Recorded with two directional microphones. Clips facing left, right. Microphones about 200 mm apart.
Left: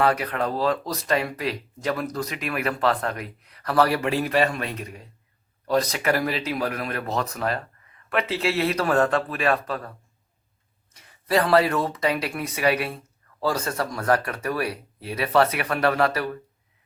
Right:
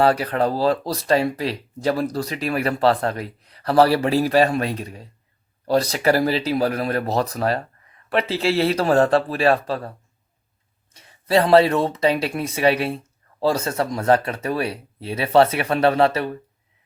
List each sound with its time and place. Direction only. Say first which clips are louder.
0.0 s speech: right 4 dB; 30° right (ahead or behind)
10.9 s speech: right 4 dB; 30° right (ahead or behind)